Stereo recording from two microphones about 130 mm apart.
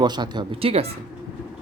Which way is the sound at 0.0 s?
35° right (ahead or behind).